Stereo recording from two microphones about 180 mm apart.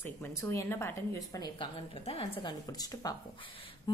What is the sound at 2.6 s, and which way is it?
Speech, 20° left (ahead or behind).